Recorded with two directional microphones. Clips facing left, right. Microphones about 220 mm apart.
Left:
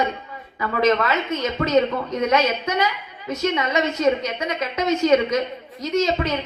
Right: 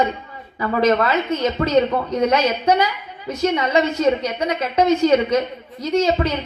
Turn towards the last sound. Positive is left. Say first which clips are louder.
# right 3 dB
turn(degrees=-30)  # may be behind; listen again after turning